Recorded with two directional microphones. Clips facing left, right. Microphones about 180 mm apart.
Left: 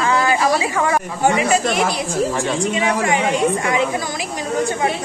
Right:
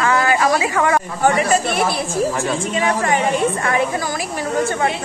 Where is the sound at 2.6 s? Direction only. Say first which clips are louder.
Left 1 dB; 15° left (ahead or behind).